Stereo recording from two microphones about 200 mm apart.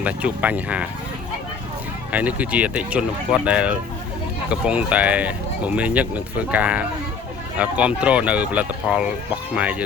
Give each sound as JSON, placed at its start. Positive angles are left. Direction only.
{"t": 0.0, "sound": "speech", "side_deg": -5}
{"t": 2.1, "sound": "speech", "side_deg": -5}